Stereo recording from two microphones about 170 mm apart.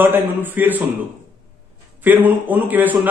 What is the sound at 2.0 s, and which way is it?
Speech, 10° right (ahead or behind).